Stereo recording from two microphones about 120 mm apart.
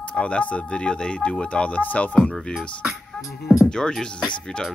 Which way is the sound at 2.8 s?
Centre (ahead or behind).